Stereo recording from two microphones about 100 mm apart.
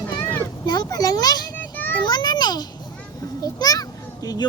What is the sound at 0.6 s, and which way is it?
Speech, 45° left (ahead or behind).